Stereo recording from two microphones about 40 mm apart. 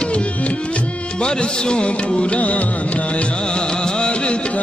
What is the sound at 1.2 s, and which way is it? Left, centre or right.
Music, centre.